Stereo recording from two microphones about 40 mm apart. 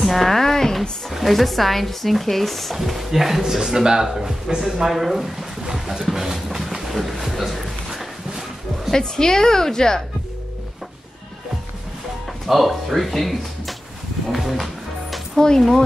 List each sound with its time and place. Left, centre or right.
0.0 s a sound: centre
1.1 s speech: centre
5.6 s a sound: centre
8.9 s a woman's voice: centre
12.3 s speech: centre
14.3 s music: centre
15.3 s speech: centre